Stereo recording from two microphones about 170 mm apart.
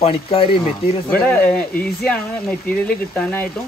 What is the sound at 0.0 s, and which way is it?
Speech, 35° left (ahead or behind).